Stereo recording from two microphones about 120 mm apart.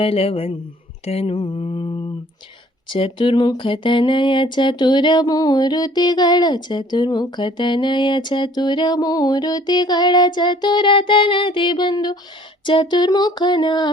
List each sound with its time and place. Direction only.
0.0 s speech: 50° left (ahead or behind)
1.0 s mantra: 55° left (ahead or behind)
1.4 s a sound: 40° left (ahead or behind)